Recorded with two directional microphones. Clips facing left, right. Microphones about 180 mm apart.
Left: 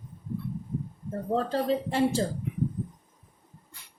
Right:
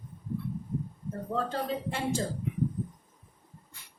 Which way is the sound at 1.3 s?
35° left (ahead or behind).